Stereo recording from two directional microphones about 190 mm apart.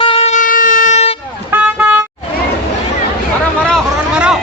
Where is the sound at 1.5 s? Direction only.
10° right (ahead or behind).